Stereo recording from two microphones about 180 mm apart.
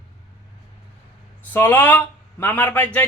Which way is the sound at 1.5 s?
10° left (ahead or behind).